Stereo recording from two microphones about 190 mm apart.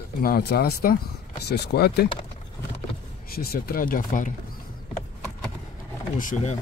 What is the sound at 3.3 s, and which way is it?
Speech, 50° left (ahead or behind).